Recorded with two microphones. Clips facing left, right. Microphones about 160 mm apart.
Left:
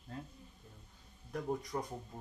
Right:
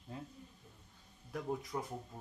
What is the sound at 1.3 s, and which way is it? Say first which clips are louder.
Speech: left 2 dB; centre (ahead or behind).